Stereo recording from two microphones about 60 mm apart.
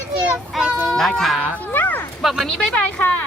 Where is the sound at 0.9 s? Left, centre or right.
Centre.